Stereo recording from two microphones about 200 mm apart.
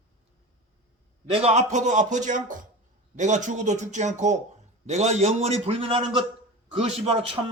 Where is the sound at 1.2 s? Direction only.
30° right (ahead or behind).